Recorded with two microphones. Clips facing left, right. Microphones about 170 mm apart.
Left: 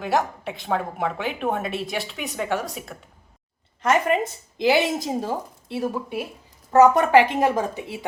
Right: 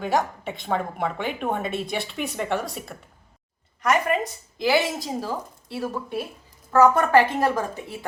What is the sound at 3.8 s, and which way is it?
A woman's voice, 25° left (ahead or behind).